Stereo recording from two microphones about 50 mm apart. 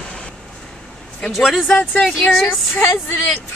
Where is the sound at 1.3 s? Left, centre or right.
Centre.